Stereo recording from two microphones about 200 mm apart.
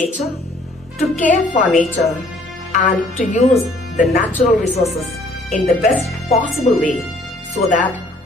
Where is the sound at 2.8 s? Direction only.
40° left (ahead or behind).